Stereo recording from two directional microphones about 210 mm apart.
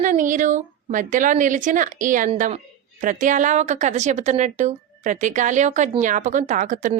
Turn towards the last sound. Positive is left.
turn(degrees=-35)  # may be behind; listen again after turning